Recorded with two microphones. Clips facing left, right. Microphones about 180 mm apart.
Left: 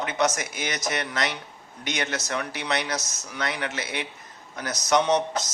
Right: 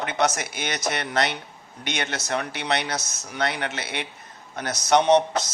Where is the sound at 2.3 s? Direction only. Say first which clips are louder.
Right 5 dB; 60° right (ahead or behind).